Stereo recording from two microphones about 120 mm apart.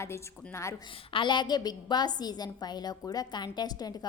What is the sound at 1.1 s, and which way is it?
A woman's voice, 40° left (ahead or behind).